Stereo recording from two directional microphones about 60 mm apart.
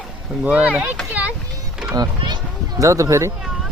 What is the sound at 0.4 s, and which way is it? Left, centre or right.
Speech, right.